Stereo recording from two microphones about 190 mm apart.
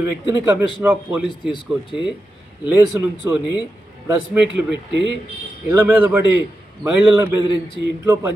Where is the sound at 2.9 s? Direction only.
10° right (ahead or behind).